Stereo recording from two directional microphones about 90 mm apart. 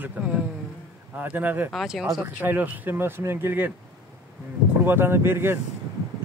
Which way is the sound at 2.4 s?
20° right (ahead or behind).